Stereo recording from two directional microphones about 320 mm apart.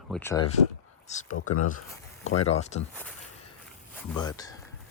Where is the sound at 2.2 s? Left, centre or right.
Left.